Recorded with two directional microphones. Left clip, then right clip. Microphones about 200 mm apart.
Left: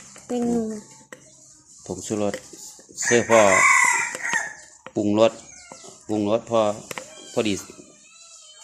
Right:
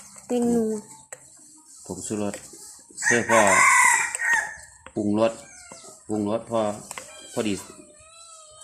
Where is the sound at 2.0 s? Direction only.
35° left (ahead or behind).